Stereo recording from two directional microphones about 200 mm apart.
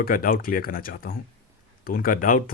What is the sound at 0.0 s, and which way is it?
Speech, 45° left (ahead or behind).